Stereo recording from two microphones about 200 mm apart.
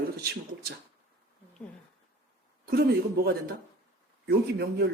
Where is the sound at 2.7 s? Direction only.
50° right (ahead or behind).